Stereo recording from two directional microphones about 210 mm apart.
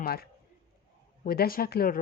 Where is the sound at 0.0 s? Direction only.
45° left (ahead or behind).